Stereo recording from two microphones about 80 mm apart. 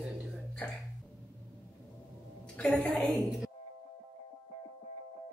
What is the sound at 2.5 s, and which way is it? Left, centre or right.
Speech, centre.